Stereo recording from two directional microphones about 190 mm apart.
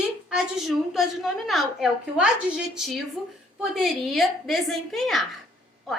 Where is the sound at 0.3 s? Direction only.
5° right (ahead or behind).